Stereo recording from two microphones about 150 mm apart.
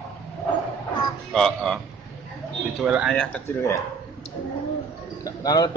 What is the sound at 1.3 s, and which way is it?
A man's voice, 5° left (ahead or behind).